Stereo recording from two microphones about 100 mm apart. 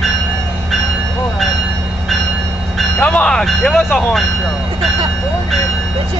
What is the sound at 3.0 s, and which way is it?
Speech, 10° left (ahead or behind).